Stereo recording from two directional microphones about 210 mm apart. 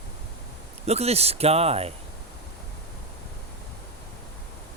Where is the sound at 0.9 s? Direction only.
30° right (ahead or behind).